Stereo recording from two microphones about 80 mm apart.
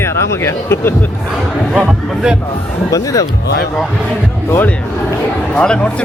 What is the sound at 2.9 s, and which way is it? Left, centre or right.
Speech, left.